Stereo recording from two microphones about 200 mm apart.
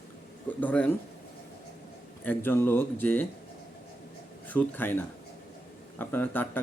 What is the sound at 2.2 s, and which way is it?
Speech, 10° left (ahead or behind).